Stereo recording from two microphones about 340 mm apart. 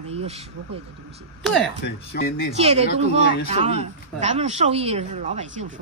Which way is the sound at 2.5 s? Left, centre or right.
Centre.